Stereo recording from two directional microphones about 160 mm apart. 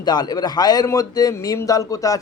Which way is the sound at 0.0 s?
25° left (ahead or behind).